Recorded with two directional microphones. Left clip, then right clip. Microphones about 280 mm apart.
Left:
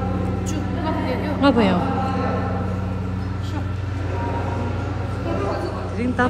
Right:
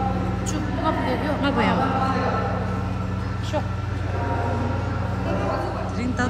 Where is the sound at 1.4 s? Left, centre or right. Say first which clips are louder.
Left 7 dB; centre.